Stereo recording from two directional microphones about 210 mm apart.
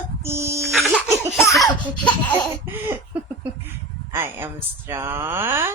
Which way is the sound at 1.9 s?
5° left (ahead or behind).